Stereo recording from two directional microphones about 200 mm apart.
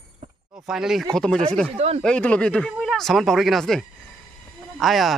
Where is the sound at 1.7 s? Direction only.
30° right (ahead or behind).